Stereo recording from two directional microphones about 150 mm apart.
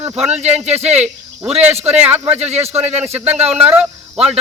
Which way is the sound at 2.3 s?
45° right (ahead or behind).